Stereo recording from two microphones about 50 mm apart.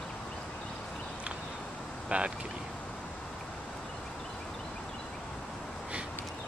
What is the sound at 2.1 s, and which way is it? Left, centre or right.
Speech, right.